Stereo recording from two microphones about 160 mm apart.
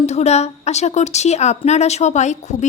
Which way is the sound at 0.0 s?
45° left (ahead or behind).